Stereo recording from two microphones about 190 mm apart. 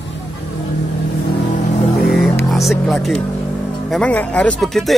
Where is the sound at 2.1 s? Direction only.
Centre (ahead or behind).